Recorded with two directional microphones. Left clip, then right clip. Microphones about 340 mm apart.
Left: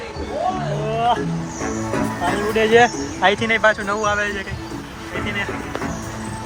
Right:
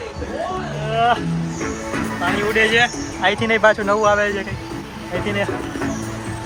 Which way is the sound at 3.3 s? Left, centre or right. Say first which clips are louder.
Right 4 dB; centre.